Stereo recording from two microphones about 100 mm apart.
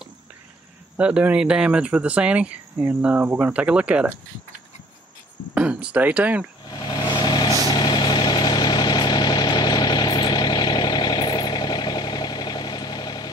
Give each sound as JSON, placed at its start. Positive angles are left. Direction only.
{"t": 0.9, "sound": "speech", "side_deg": -15}
{"t": 5.5, "sound": "speech", "side_deg": -10}
{"t": 6.7, "sound": "vehicle", "side_deg": 45}